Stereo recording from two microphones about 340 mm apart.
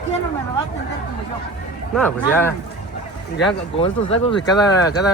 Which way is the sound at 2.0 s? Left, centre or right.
Centre.